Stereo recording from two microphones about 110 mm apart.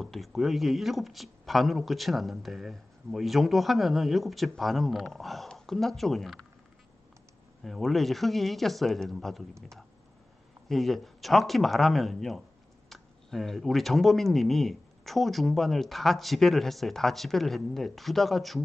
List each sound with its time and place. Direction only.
0.0 s speech: centre (ahead or behind)
7.6 s speech: centre (ahead or behind)